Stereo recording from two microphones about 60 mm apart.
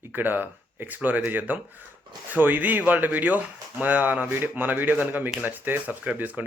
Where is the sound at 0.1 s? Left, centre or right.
Right.